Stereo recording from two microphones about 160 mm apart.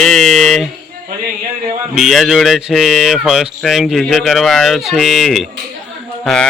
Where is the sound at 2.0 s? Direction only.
Centre (ahead or behind).